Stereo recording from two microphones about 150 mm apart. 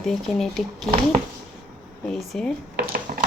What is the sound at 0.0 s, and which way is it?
Speech, centre (ahead or behind).